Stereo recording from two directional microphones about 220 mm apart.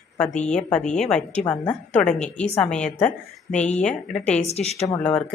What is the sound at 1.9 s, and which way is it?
A woman's voice, 5° left (ahead or behind).